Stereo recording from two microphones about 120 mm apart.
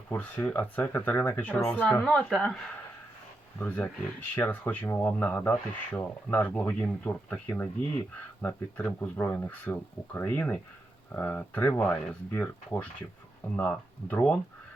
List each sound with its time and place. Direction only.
0.1 s speech: 15° left (ahead or behind)
3.6 s speech: 10° left (ahead or behind)